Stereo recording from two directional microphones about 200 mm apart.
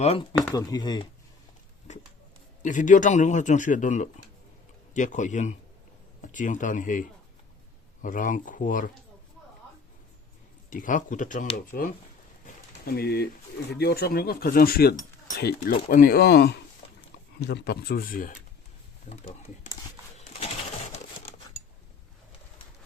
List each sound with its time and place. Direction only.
0.0 s speech: 30° left (ahead or behind)
0.5 s speech: 20° left (ahead or behind)
2.6 s speech: 40° left (ahead or behind)
8.0 s speech: 40° left (ahead or behind)
10.7 s speech: 40° left (ahead or behind)
20.1 s pigeon: 35° left (ahead or behind)